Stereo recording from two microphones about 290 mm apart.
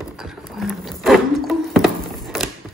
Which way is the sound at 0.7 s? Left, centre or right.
Centre.